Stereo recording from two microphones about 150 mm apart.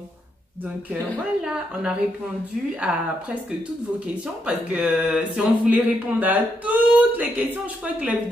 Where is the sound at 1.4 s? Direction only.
5° right (ahead or behind).